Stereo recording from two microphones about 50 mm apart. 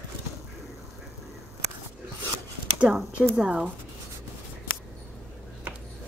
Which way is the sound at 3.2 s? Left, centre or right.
Centre.